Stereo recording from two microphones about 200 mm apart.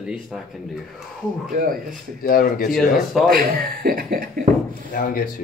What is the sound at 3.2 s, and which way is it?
Speech, 45° right (ahead or behind).